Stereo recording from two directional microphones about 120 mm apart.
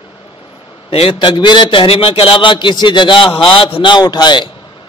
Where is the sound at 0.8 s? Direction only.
50° left (ahead or behind).